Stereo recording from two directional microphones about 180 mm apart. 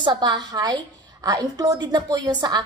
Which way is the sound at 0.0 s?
25° right (ahead or behind).